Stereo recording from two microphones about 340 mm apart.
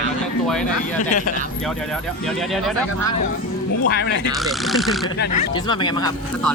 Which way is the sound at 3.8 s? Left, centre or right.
Left.